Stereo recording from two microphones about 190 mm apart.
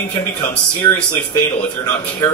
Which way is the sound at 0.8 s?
15° left (ahead or behind).